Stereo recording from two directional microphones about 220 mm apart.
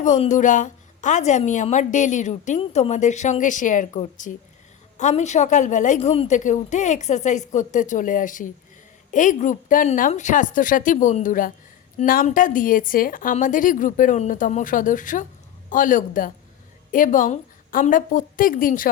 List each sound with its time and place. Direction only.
0.0 s a woman's voice: 35° left (ahead or behind)